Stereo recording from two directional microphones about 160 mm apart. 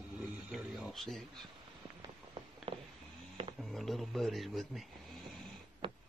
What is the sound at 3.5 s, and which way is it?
Speech, centre (ahead or behind).